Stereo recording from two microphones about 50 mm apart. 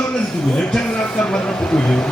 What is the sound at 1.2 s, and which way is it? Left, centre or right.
Speech, left.